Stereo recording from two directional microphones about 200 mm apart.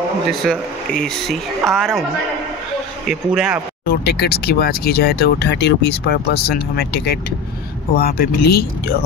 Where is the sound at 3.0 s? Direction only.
5° right (ahead or behind).